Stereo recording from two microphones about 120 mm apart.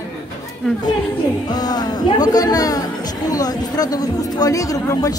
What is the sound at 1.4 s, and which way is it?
Speech, 35° left (ahead or behind).